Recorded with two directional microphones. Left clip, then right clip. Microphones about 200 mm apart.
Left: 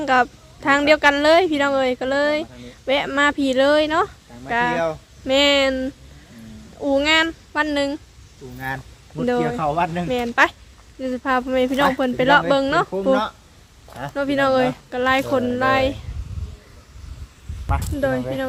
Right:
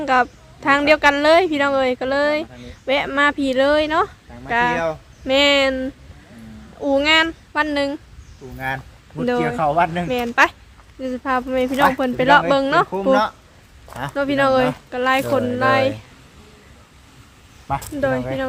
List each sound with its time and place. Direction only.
0.0 s a woman's voice: centre (ahead or behind)
13.1 s speech: 35° right (ahead or behind)
14.1 s a woman's voice: 5° right (ahead or behind)